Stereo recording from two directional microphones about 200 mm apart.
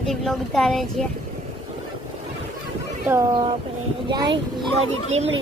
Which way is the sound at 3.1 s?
15° right (ahead or behind).